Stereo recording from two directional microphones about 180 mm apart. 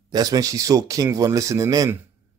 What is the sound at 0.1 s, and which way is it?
Speech, 20° right (ahead or behind).